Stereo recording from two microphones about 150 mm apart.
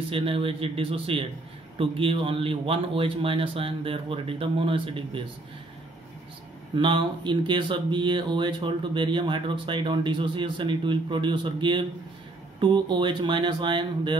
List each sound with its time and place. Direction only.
0.1 s speech: 40° right (ahead or behind)
6.7 s speech: 30° right (ahead or behind)